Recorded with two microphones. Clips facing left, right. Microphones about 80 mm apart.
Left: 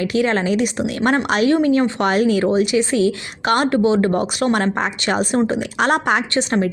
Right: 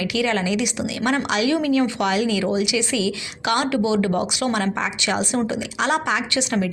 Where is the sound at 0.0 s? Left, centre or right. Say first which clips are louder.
Left 4 dB; left.